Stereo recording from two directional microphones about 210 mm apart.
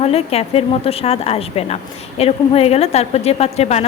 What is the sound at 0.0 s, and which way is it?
Speech, 30° left (ahead or behind).